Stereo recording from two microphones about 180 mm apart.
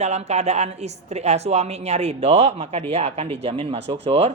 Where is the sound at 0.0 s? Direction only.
40° right (ahead or behind).